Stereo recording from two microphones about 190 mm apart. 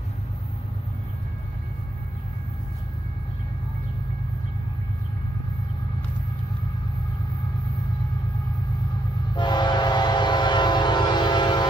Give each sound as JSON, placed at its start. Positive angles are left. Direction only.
{"t": 9.3, "sound": "train", "side_deg": 25}